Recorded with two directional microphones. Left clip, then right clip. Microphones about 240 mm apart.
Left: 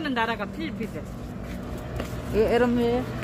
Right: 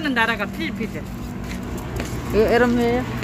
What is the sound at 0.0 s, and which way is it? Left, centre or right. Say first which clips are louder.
Speech: right 6 dB; centre.